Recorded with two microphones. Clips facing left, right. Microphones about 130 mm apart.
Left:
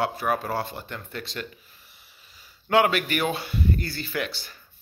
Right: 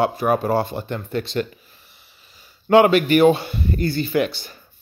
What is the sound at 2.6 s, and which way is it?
Speech, 30° right (ahead or behind).